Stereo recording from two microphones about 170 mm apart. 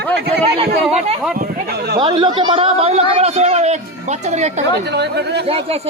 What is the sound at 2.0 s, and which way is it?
A man's voice, 30° right (ahead or behind).